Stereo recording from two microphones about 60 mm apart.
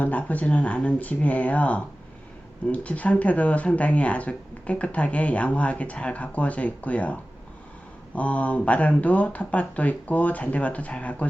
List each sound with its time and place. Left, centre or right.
0.0 s speech: left